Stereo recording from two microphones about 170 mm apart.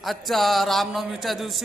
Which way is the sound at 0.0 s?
Centre (ahead or behind).